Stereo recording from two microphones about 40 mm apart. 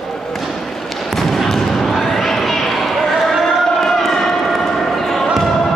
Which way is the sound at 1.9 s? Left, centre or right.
Centre.